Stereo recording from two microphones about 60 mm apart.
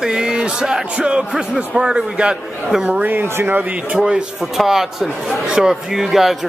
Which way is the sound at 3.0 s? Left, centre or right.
Right.